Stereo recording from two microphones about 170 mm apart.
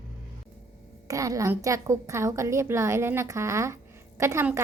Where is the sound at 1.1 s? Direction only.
20° right (ahead or behind).